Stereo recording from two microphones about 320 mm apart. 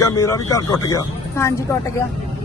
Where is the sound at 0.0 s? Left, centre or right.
Centre.